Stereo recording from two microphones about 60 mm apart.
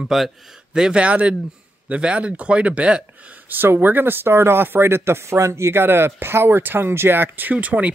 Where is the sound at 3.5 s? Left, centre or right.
Right.